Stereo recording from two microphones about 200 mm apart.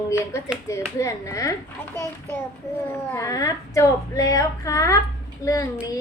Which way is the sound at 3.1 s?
15° left (ahead or behind).